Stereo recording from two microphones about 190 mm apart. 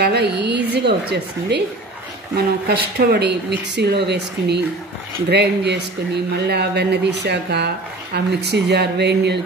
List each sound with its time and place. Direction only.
0.0 s speech: 60° right (ahead or behind)